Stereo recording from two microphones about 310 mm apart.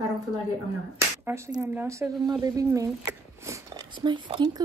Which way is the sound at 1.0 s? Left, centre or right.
Centre.